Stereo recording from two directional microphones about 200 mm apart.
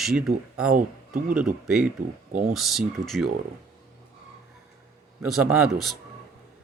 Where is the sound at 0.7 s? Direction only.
45° right (ahead or behind).